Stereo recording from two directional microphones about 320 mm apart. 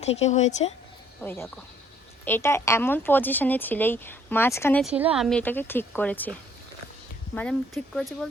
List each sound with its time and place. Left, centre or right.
0.0 s speech: left
1.2 s speech: centre
7.3 s speech: centre